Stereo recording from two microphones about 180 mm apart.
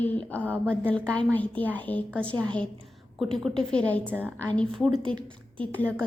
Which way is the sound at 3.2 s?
Centre (ahead or behind).